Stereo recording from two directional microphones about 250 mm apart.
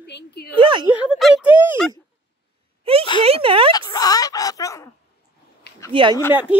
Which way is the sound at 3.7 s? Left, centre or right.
Centre.